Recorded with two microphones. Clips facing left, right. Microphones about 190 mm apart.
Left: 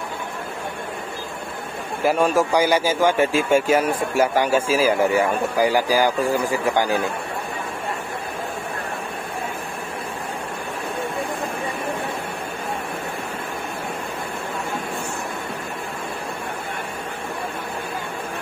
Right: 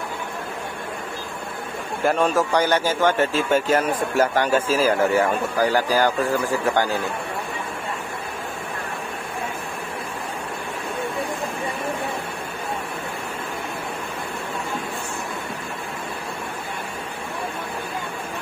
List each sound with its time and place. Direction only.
2.0 s a man's voice: 10° left (ahead or behind)